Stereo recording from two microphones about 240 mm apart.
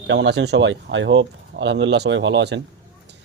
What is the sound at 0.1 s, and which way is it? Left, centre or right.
A man's voice, right.